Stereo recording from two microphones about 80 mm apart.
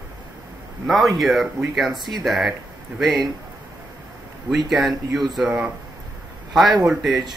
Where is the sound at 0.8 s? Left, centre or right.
Centre.